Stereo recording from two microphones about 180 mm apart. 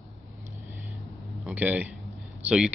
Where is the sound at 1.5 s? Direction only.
10° right (ahead or behind).